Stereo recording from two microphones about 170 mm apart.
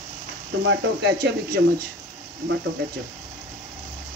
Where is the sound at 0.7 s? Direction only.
90° right.